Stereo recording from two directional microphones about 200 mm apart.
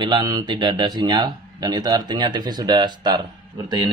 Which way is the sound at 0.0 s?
20° right (ahead or behind).